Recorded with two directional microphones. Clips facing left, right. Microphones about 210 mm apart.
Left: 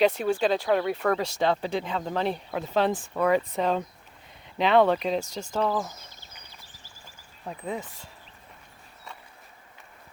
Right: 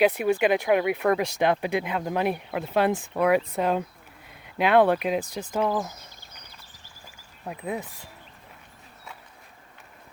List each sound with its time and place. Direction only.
0.0 s speech: 15° right (ahead or behind)
7.4 s speech: 5° right (ahead or behind)